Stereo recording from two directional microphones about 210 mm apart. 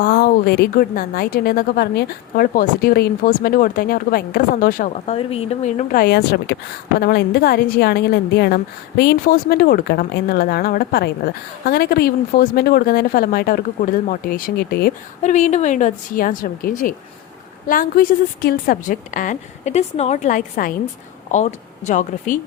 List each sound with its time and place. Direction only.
0.0 s a woman's voice: 45° left (ahead or behind)
15.2 s a woman's voice: 35° left (ahead or behind)